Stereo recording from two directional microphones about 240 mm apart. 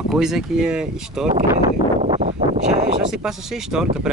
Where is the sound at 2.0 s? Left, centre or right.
Right.